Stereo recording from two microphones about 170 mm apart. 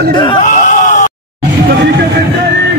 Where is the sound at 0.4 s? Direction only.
50° left (ahead or behind).